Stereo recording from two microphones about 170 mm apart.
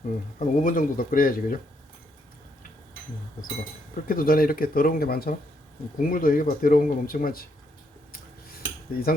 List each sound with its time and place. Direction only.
0.3 s speech: 50° left (ahead or behind)
4.0 s speech: 55° left (ahead or behind)
8.9 s speech: 60° left (ahead or behind)